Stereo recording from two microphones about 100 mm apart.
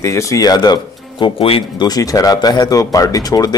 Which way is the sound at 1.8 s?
40° left (ahead or behind).